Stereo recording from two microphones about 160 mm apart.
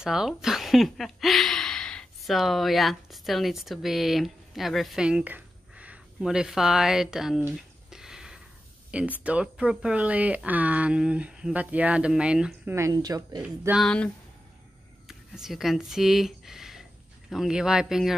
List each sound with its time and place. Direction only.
0.0 s speech: 5° right (ahead or behind)
7.5 s a sound: 5° right (ahead or behind)
9.2 s speech: 5° right (ahead or behind)
12.7 s speech: 20° right (ahead or behind)
13.4 s speech: 10° right (ahead or behind)
13.8 s speech: 5° left (ahead or behind)